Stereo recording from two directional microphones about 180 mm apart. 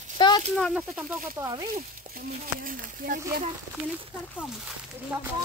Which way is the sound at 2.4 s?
50° right (ahead or behind).